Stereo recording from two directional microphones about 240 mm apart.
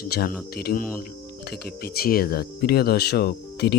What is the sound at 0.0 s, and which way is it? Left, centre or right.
Speech, left.